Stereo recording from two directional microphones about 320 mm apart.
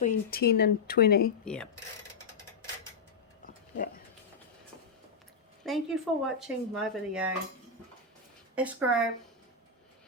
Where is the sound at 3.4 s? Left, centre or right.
Left.